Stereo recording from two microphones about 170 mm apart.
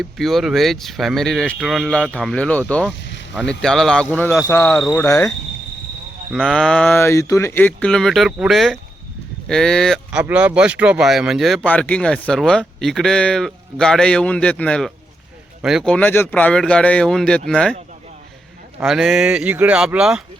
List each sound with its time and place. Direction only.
0.0 s speech: centre (ahead or behind); by 5.3 s 15° left (ahead or behind)
6.3 s speech: 5° left (ahead or behind)
18.8 s speech: centre (ahead or behind)